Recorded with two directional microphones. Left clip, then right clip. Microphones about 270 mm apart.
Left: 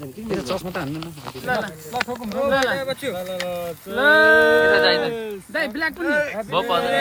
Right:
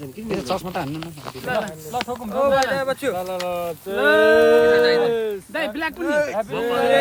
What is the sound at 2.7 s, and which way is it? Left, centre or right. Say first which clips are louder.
Speech: right 3 dB; right.